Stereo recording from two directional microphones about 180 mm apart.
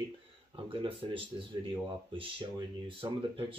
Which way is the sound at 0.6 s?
30° right (ahead or behind).